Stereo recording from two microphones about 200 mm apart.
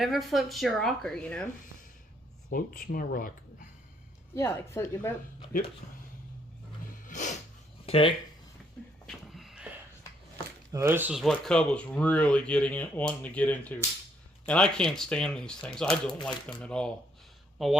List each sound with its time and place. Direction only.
0.0 s speech: centre (ahead or behind)
2.5 s speech: 45° left (ahead or behind)
4.4 s speech: 15° left (ahead or behind)
7.1 s a sound: 40° left (ahead or behind)
7.9 s speech: 25° left (ahead or behind)
9.0 s a sound: centre (ahead or behind)
10.7 s speech: 15° right (ahead or behind)